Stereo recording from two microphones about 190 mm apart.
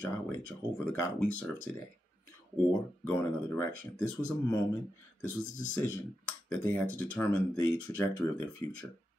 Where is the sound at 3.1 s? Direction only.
10° left (ahead or behind).